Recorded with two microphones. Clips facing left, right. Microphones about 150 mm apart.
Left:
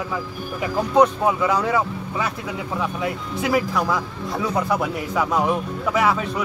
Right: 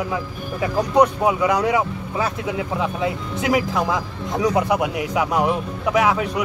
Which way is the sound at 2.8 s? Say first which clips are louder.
Right 2 dB; 20° right (ahead or behind).